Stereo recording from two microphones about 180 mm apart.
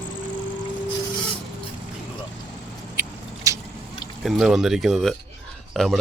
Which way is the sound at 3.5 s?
15° right (ahead or behind).